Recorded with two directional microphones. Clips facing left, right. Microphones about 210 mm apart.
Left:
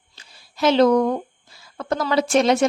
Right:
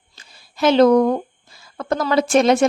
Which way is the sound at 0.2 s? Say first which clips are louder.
Right 2 dB; 55° right (ahead or behind).